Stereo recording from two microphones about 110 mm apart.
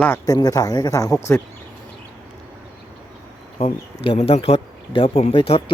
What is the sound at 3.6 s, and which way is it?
Speech, 65° left (ahead or behind).